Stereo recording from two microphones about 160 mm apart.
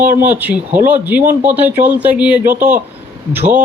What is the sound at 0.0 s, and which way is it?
Speech, 55° right (ahead or behind).